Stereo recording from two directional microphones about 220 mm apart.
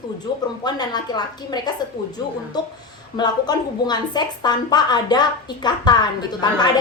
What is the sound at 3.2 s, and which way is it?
A woman's voice, 20° left (ahead or behind).